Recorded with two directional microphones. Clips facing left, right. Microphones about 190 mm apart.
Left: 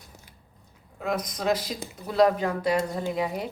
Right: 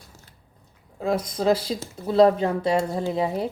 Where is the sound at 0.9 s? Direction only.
30° right (ahead or behind).